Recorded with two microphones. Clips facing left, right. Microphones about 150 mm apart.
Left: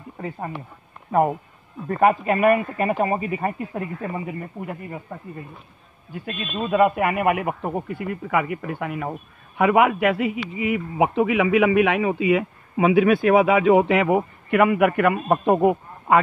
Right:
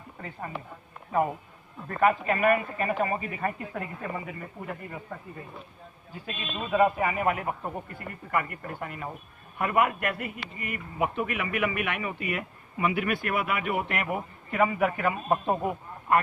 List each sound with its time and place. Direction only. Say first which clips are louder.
2.0 s speech: left 5 dB; 45° left (ahead or behind)
6.2 s a man's voice: left 7 dB; 60° left (ahead or behind); by 9.1 s 75° left (ahead or behind)
9.6 s a man's voice: left 8 dB; 90° left